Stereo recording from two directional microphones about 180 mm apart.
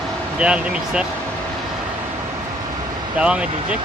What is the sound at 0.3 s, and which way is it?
Speech, 5° right (ahead or behind).